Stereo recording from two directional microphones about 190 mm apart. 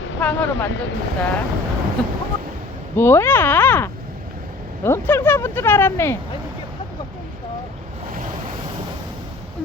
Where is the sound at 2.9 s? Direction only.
10° left (ahead or behind).